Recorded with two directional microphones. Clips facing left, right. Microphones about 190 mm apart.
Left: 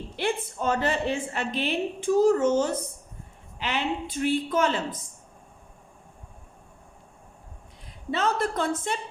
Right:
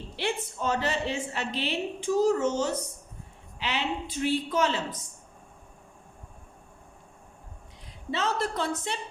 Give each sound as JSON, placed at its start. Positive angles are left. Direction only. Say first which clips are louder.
{"t": 0.2, "sound": "a woman's voice", "louder": "left 3 dB", "side_deg": 50}
{"t": 8.1, "sound": "a woman's voice", "louder": "left 3 dB", "side_deg": 50}